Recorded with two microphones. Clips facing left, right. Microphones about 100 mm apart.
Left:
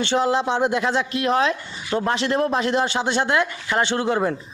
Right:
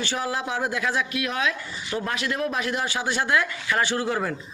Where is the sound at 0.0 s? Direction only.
25° left (ahead or behind).